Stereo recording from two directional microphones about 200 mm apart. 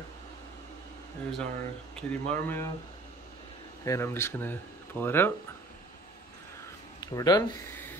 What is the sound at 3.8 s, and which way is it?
Speech, 15° left (ahead or behind).